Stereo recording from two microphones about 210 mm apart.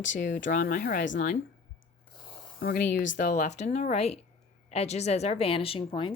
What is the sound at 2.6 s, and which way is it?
Speech, 45° left (ahead or behind).